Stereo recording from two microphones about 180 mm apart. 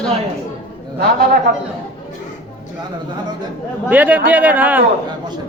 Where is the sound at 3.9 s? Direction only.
10° right (ahead or behind).